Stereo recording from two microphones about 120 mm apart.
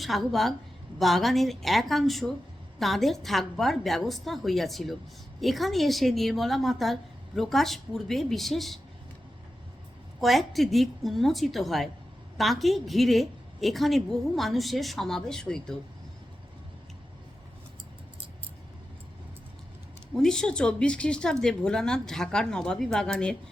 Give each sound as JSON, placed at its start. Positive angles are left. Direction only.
{"t": 0.0, "sound": "a woman's voice", "side_deg": 0}
{"t": 10.2, "sound": "a woman's voice", "side_deg": 0}
{"t": 20.1, "sound": "a woman's voice", "side_deg": 5}